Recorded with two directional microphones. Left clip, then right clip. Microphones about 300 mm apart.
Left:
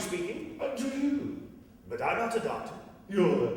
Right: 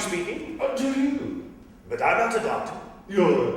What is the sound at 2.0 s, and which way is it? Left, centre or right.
Speech, centre.